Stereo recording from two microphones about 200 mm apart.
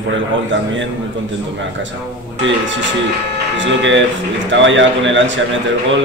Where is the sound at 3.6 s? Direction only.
65° right (ahead or behind).